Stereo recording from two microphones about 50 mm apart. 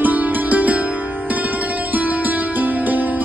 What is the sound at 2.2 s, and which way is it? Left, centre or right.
Music, right.